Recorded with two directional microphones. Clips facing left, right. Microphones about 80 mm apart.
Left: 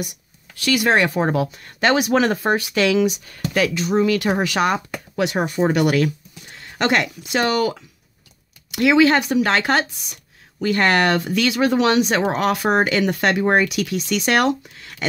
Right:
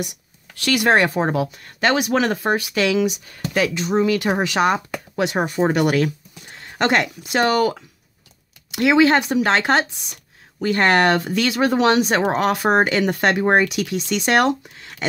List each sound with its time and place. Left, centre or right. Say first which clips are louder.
0.6 s speech: left 1 dB; right
0.8 s speech: right 2 dB; right
1.3 s speech: left 1 dB; centre
3.5 s speech: even; right
8.7 s speech: even; right